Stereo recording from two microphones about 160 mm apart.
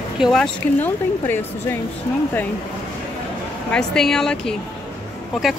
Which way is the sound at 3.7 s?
5° left (ahead or behind).